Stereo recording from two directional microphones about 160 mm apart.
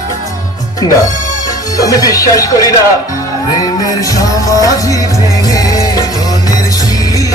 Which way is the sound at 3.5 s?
25° left (ahead or behind).